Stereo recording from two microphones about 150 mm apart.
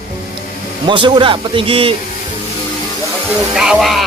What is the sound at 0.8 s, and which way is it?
A man's voice, 35° right (ahead or behind).